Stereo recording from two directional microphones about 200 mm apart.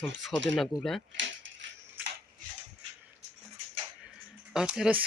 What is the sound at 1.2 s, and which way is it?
Keys jangling, 65° right (ahead or behind).